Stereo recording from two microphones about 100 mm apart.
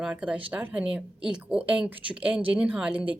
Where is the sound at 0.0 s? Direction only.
10° right (ahead or behind).